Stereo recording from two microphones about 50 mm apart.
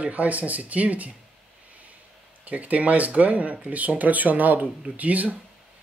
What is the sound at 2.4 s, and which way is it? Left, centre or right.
Speech, right.